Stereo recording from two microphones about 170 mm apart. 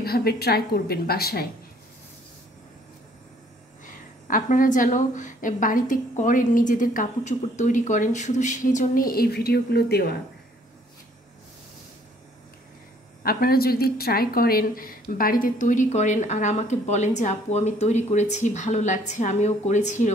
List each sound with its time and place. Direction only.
0.0 s a woman's voice: 65° left (ahead or behind)
3.8 s a woman's voice: 50° left (ahead or behind); by 10.1 s 70° left (ahead or behind)
13.2 s a woman's voice: 60° left (ahead or behind); by 20.1 s 45° left (ahead or behind)